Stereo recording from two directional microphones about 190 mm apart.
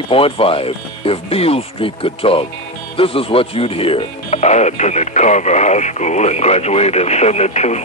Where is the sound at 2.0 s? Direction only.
30° left (ahead or behind).